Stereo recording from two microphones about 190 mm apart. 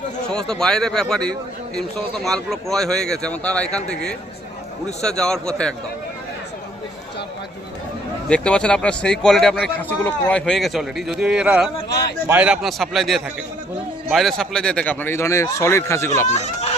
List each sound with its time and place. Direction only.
0.3 s a man's voice: 5° left (ahead or behind)
8.3 s a man's voice: 5° left (ahead or behind)
11.9 s a sound: 60° left (ahead or behind)
12.3 s a man's voice: 5° right (ahead or behind); by 16.2 s 15° left (ahead or behind)
16.2 s speech: 35° left (ahead or behind)